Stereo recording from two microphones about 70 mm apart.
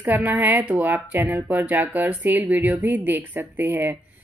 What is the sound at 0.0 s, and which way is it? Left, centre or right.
A woman's voice, right.